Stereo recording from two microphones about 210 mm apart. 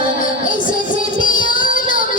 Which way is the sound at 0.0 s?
40° left (ahead or behind).